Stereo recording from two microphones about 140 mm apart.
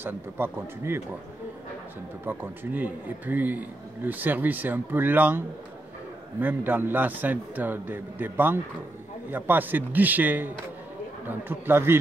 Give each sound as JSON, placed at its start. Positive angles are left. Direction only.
{"t": 0.0, "sound": "a man's voice", "side_deg": -15}
{"t": 2.2, "sound": "a man's voice", "side_deg": -15}
{"t": 6.4, "sound": "a man's voice", "side_deg": -15}